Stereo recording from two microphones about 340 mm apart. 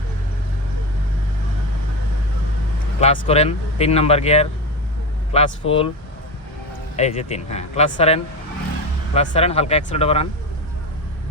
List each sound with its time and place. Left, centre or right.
3.0 s speech: centre
6.9 s speech: centre